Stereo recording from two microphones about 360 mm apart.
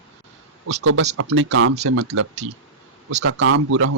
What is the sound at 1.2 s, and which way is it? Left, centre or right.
Speech, right.